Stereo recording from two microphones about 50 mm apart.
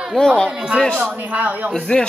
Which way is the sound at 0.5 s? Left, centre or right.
Centre.